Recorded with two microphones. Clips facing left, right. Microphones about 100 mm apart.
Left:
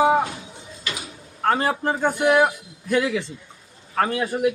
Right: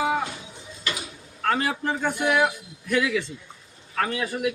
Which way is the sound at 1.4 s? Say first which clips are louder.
Left 4 dB; 30° left (ahead or behind).